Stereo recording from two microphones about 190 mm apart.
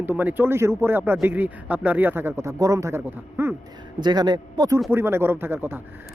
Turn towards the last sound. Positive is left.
turn(degrees=-10)  # may be behind; listen again after turning